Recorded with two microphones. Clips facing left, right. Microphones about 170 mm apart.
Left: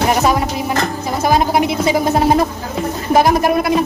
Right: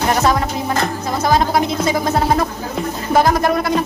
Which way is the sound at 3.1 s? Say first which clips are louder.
Left 2 dB; 15° left (ahead or behind).